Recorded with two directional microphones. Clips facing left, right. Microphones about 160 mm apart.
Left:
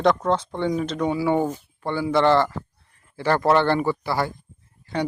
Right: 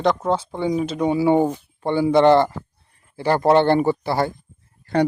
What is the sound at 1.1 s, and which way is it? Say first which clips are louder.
A man's voice: right 6 dB; 20° right (ahead or behind).